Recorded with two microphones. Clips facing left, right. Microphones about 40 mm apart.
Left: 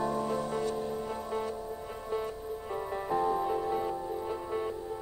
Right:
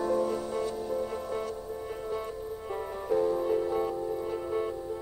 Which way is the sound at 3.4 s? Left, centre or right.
Centre.